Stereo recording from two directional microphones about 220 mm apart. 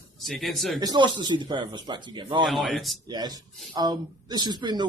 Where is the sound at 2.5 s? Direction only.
Centre (ahead or behind).